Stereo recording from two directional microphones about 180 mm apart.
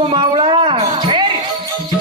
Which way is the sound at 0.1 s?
25° right (ahead or behind).